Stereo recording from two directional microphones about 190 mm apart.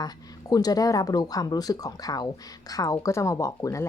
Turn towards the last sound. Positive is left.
turn(degrees=15)  # may be behind; listen again after turning